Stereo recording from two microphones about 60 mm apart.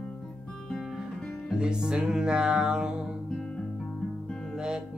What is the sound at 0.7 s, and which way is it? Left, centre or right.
Music, centre.